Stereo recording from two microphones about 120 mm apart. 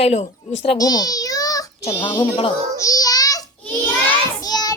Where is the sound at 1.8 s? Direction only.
55° left (ahead or behind).